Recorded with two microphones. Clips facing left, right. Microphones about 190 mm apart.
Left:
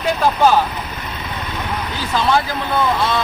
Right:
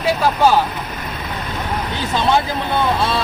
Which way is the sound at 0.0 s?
5° right (ahead or behind).